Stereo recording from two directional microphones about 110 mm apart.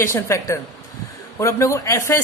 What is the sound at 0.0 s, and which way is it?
A woman's voice, 25° left (ahead or behind).